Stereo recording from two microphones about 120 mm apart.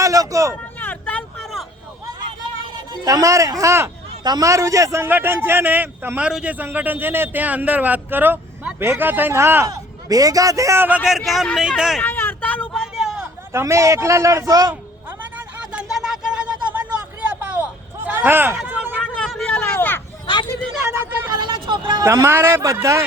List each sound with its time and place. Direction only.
0.0 s a sound: 30° right (ahead or behind)
0.8 s vehicle: 15° left (ahead or behind)
2.9 s a man's voice: 30° right (ahead or behind)
10.8 s a man's voice: 10° right (ahead or behind)
12.0 s vehicle: 15° left (ahead or behind)
12.8 s vehicle: centre (ahead or behind)
13.5 s a man's voice: 20° right (ahead or behind)
15.4 s a sound: 10° right (ahead or behind)
19.3 s a sound: 10° left (ahead or behind)
20.2 s a sound: 40° left (ahead or behind)
20.8 s vehicle: 20° right (ahead or behind)
21.2 s vehicle: 35° right (ahead or behind)
22.0 s a man's voice: 25° right (ahead or behind)